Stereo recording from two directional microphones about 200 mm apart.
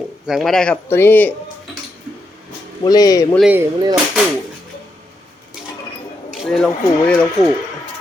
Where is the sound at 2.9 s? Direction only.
20° left (ahead or behind).